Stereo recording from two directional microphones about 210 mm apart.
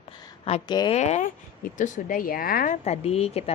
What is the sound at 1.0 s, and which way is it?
A woman's voice, 35° left (ahead or behind).